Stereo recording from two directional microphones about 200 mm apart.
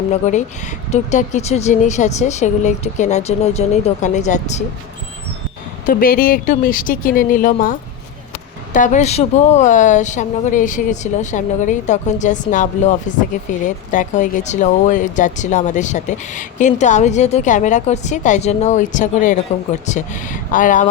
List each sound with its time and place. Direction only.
0.1 s speech: 35° left (ahead or behind)
5.8 s speech: 45° left (ahead or behind)